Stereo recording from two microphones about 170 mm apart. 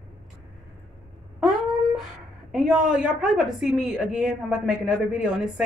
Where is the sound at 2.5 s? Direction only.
5° right (ahead or behind).